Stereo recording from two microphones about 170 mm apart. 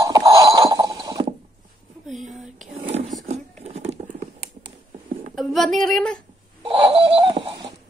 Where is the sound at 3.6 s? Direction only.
40° right (ahead or behind).